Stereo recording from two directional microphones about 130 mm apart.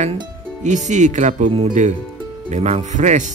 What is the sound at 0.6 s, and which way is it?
Speech, 65° right (ahead or behind).